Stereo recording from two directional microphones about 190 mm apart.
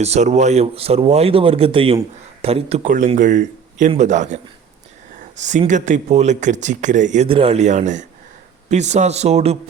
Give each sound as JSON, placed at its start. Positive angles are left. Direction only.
{"t": 0.0, "sound": "speech", "side_deg": -35}
{"t": 5.5, "sound": "speech", "side_deg": -40}